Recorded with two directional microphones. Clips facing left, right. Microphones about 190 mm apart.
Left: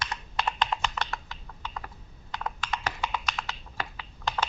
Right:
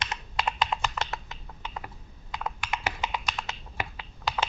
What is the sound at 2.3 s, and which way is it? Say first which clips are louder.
Computer keyboard: even; 5° right (ahead or behind).